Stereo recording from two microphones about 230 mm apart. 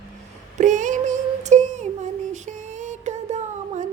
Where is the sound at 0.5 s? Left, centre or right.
Right.